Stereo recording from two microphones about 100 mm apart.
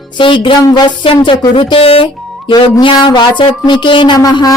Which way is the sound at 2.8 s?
50° left (ahead or behind).